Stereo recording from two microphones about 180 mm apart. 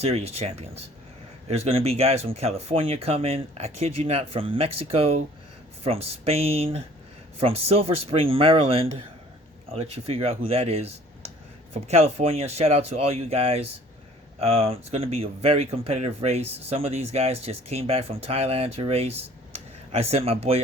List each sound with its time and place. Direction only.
0.0 s speech: 35° right (ahead or behind)